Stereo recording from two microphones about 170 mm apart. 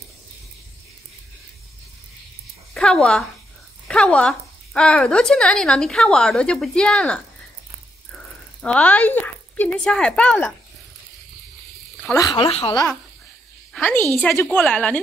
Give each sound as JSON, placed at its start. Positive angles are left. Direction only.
{"t": 2.7, "sound": "speech", "side_deg": 5}
{"t": 8.6, "sound": "speech", "side_deg": 10}
{"t": 12.1, "sound": "speech", "side_deg": 25}
{"t": 13.7, "sound": "speech", "side_deg": 10}